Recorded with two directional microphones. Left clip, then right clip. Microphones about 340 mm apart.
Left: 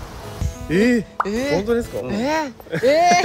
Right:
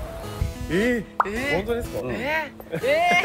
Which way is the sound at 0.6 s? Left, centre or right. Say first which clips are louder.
Left 5 dB; left.